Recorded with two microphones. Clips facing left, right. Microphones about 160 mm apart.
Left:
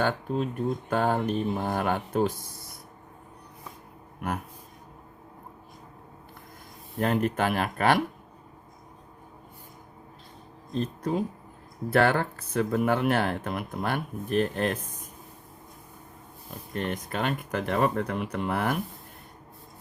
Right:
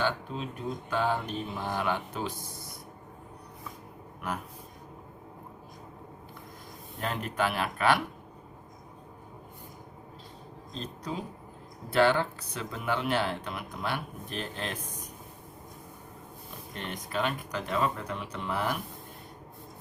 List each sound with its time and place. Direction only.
0.0 s speech: 50° left (ahead or behind)
7.0 s speech: 50° left (ahead or behind)
10.7 s speech: 55° left (ahead or behind)
16.7 s speech: 50° left (ahead or behind)